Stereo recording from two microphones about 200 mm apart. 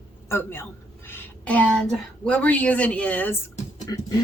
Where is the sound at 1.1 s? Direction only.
10° left (ahead or behind).